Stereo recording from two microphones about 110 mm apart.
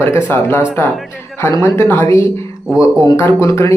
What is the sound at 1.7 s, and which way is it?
Speech, 20° left (ahead or behind).